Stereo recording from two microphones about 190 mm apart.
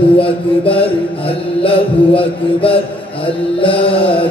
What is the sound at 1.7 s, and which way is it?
Mantra, 30° left (ahead or behind).